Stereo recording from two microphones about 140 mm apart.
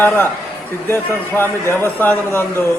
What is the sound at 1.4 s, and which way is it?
Speech, 15° left (ahead or behind).